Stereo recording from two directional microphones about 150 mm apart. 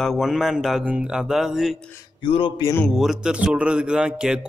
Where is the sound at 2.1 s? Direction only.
35° left (ahead or behind).